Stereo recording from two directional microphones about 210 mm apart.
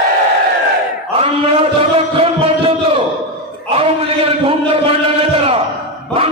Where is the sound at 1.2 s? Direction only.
25° right (ahead or behind).